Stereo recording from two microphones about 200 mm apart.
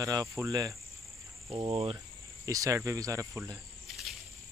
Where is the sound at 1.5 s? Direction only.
30° right (ahead or behind).